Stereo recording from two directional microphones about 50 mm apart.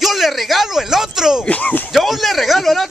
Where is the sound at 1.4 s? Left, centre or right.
Left.